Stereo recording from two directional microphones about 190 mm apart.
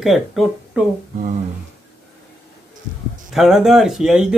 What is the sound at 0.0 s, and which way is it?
Speech, centre (ahead or behind).